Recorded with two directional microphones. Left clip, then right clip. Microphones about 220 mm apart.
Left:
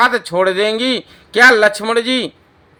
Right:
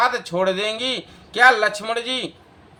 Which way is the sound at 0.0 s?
40° left (ahead or behind).